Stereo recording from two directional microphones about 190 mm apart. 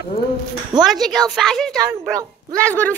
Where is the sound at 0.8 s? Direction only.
Centre (ahead or behind).